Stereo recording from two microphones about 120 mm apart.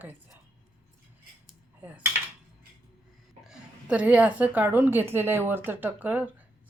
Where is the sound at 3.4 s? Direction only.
10° right (ahead or behind).